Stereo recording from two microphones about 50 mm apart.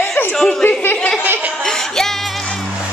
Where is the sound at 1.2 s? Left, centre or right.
Right.